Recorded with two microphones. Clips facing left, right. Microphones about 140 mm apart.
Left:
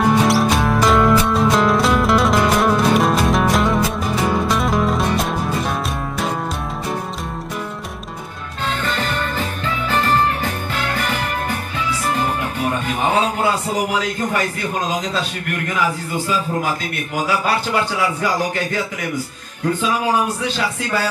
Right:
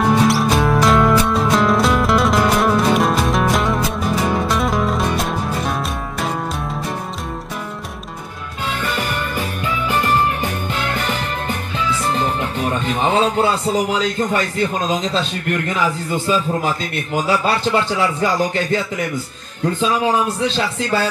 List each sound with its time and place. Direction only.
0.0 s music: centre (ahead or behind)
8.8 s music: 10° right (ahead or behind)
12.8 s music: 25° right (ahead or behind)
14.3 s a man's voice: 25° right (ahead or behind)
17.9 s a man's voice: 25° right (ahead or behind)
20.4 s a man's voice: 25° right (ahead or behind)